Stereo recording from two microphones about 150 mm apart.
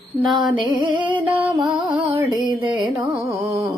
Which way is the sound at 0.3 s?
Centre (ahead or behind).